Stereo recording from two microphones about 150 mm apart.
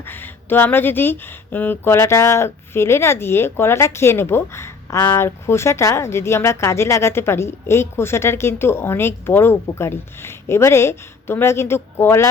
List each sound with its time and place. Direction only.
0.0 s speech: 15° left (ahead or behind)